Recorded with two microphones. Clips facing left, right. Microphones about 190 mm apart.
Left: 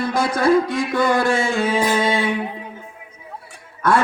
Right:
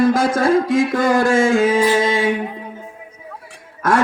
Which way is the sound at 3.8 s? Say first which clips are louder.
Right 1 dB; 45° right (ahead or behind).